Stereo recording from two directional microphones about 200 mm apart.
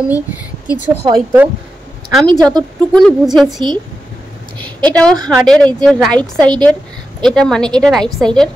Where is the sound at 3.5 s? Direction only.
25° right (ahead or behind).